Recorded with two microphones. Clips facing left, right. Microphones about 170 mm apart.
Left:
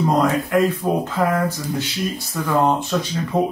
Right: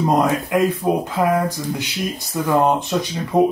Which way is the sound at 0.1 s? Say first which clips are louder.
Right 1 dB; 20° right (ahead or behind).